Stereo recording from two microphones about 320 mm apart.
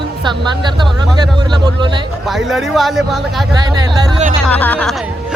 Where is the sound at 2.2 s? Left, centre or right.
Centre.